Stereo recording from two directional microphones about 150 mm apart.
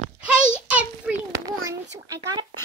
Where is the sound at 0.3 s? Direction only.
10° right (ahead or behind).